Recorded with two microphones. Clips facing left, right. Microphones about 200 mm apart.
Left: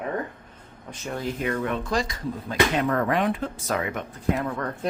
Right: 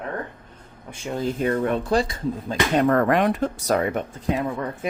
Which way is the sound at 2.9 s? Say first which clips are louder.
Right 4 dB; 55° right (ahead or behind).